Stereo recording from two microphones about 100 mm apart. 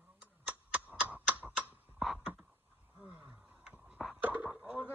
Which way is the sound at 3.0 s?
15° right (ahead or behind).